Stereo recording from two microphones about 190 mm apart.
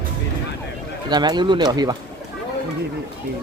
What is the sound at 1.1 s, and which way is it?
Speech, 20° right (ahead or behind).